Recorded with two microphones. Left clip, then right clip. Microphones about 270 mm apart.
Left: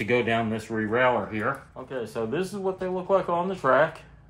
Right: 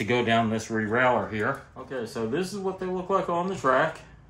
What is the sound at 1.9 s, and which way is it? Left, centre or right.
Speech, left.